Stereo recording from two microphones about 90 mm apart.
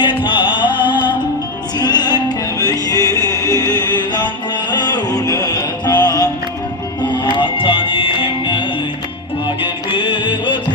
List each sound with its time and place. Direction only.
0.0 s music: 60° left (ahead or behind)
7.3 s music: 70° left (ahead or behind)
9.9 s music: 65° left (ahead or behind)